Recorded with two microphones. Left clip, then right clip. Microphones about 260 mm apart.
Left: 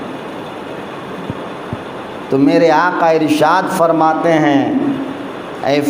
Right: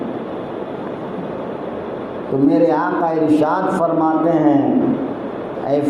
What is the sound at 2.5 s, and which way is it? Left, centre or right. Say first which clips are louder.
A man's voice: left 5 dB; left.